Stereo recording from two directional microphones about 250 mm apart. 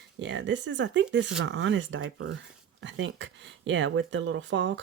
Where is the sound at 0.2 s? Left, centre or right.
Right.